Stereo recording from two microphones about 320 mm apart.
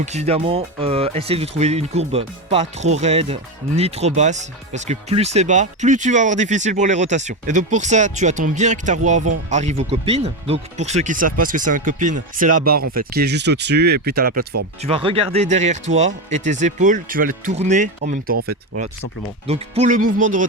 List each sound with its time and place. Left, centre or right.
0.0 s speech: right
14.8 s speech: centre
19.5 s speech: centre